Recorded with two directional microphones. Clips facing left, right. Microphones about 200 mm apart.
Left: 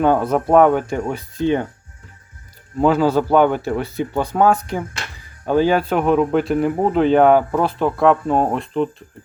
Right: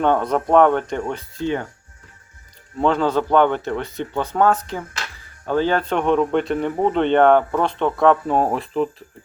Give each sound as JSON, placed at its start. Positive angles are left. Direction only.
{"t": 0.0, "sound": "speech", "side_deg": 5}
{"t": 1.4, "sound": "speech", "side_deg": 20}
{"t": 2.7, "sound": "a man's voice", "side_deg": 5}